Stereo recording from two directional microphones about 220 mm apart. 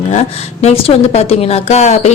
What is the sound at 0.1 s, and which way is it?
A woman's voice, 30° left (ahead or behind).